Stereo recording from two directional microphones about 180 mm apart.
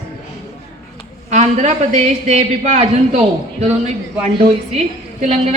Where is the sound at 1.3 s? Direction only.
40° right (ahead or behind).